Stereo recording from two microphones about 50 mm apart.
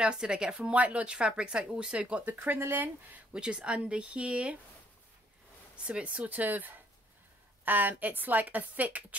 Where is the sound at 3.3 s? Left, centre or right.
Centre.